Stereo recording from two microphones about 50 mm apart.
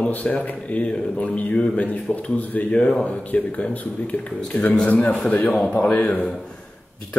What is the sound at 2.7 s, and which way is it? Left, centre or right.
Speech, centre.